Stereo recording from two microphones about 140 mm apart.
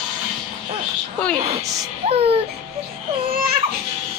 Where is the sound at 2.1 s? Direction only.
45° right (ahead or behind).